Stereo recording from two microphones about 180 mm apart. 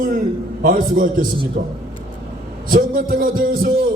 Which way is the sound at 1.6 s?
55° right (ahead or behind).